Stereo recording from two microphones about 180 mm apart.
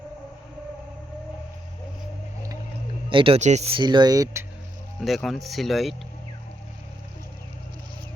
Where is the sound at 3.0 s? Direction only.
30° right (ahead or behind).